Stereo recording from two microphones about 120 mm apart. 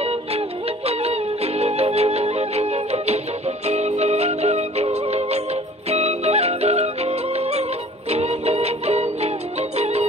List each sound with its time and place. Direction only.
0.0 s music: 55° right (ahead or behind)